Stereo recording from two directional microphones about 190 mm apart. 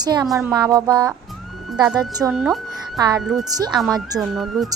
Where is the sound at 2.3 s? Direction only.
Centre (ahead or behind).